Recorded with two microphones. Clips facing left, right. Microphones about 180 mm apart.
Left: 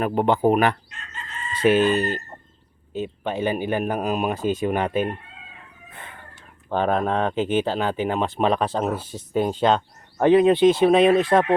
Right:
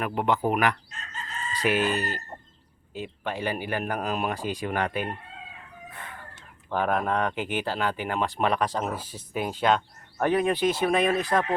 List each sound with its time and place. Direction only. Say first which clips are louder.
0.0 s speech: left 6 dB; 30° left (ahead or behind)
0.9 s chicken: even; 40° right (ahead or behind)
1.6 s speech: left 8 dB; 30° left (ahead or behind)
2.9 s speech: left 6 dB; 20° left (ahead or behind)
5.9 s chicken: left 2 dB; 25° left (ahead or behind)
6.7 s speech: left 4 dB; 25° left (ahead or behind)
9.0 s speech: left 5 dB; 10° right (ahead or behind)
9.4 s speech: left 4 dB; 25° left (ahead or behind)